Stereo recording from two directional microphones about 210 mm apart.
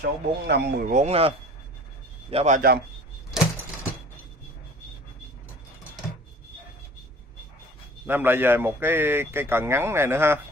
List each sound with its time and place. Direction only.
0.0 s speech: 50° right (ahead or behind); by 1.3 s 30° right (ahead or behind)
2.3 s a man's voice: 35° right (ahead or behind)
8.1 s a man's voice: 10° right (ahead or behind)